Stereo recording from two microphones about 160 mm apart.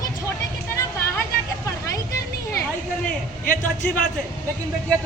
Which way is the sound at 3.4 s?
55° left (ahead or behind).